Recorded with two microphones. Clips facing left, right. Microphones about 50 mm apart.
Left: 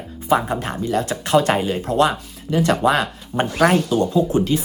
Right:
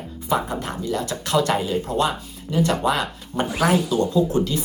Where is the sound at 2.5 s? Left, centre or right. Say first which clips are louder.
Left 3 dB; left.